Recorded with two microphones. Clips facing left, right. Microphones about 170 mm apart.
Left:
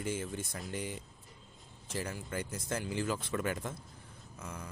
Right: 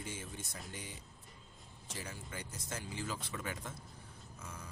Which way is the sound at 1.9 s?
55° left (ahead or behind).